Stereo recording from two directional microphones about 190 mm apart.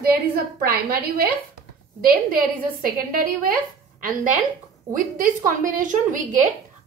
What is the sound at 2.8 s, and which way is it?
Speech, 50° right (ahead or behind).